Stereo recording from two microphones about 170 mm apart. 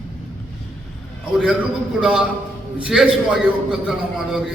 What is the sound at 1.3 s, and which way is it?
A man's voice, 5° right (ahead or behind).